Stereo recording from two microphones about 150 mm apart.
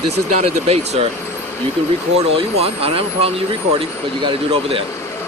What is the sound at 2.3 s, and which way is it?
Speech, 40° right (ahead or behind).